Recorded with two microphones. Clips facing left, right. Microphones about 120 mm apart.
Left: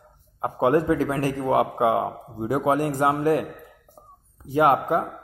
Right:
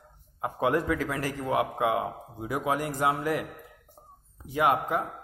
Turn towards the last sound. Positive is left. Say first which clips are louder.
# left 6 dB
turn(degrees=40)  # may be behind; listen again after turning